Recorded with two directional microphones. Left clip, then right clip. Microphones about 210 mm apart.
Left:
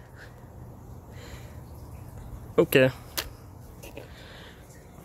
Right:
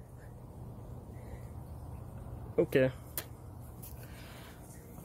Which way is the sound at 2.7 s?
25° left (ahead or behind).